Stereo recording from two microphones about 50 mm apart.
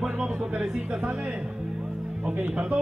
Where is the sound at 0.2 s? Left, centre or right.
Centre.